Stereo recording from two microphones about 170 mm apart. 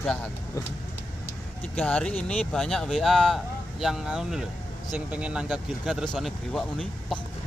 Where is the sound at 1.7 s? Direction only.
5° left (ahead or behind).